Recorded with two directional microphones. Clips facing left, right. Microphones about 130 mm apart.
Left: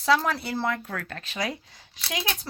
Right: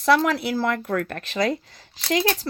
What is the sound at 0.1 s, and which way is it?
Speech, 70° right (ahead or behind).